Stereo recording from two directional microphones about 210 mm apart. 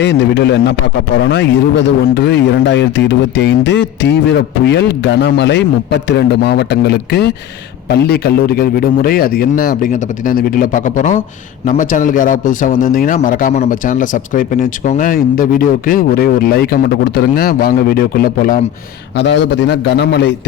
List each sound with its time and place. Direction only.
0.0 s a man's voice: 55° left (ahead or behind)
19.1 s a man's voice: 55° left (ahead or behind)